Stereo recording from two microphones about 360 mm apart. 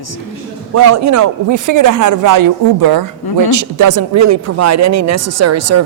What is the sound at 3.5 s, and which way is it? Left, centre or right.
Speech, right.